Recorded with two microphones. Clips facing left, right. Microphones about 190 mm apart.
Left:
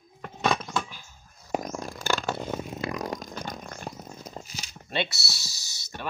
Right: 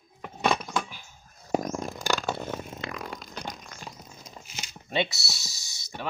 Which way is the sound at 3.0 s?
45° left (ahead or behind).